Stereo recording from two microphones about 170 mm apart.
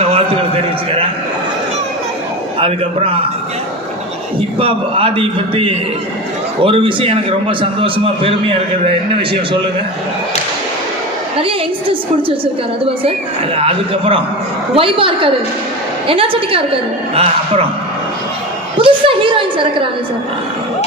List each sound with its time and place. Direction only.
0.1 s a sound: 35° right (ahead or behind)
2.6 s a man's voice: 35° right (ahead or behind)
4.6 s a man's voice: 30° right (ahead or behind)
11.3 s a woman's voice: 35° right (ahead or behind)
13.6 s a man's voice: 35° right (ahead or behind)
18.8 s a sound: 30° right (ahead or behind)